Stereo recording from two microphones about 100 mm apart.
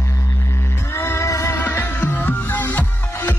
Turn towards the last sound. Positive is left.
turn(degrees=20)  # may be behind; listen again after turning